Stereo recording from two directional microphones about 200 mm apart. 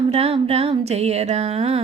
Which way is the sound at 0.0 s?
30° right (ahead or behind).